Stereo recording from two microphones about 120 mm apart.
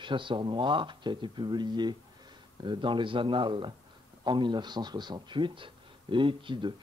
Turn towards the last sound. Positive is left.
turn(degrees=-45)  # may be behind; listen again after turning